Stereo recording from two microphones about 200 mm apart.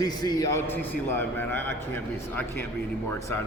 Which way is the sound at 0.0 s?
20° left (ahead or behind).